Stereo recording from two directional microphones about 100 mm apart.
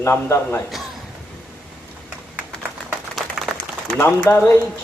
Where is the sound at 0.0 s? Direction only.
25° left (ahead or behind).